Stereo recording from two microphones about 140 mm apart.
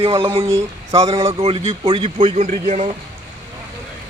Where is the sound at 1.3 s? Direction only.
40° right (ahead or behind).